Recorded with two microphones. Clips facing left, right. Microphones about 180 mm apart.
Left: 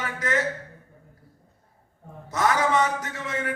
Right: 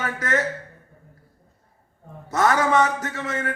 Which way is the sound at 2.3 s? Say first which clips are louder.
Right 3 dB; 50° right (ahead or behind).